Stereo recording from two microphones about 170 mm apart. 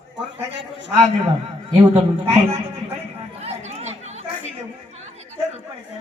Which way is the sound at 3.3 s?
40° right (ahead or behind).